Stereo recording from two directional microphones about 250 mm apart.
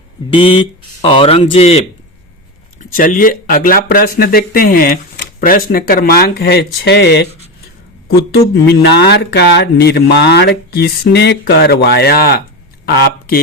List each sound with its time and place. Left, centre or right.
0.3 s speech: left
2.9 s speech: left